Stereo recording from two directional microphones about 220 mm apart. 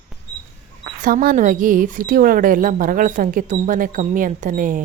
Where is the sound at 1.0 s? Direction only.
40° right (ahead or behind).